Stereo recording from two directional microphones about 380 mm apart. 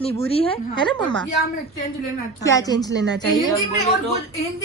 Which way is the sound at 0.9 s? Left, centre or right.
Centre.